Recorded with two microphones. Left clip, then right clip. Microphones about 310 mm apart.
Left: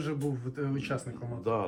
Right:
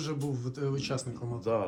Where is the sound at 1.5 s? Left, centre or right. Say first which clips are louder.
Right 1 dB; centre.